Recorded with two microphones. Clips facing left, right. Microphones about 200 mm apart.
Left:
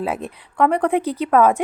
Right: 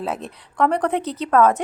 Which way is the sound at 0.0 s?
5° left (ahead or behind).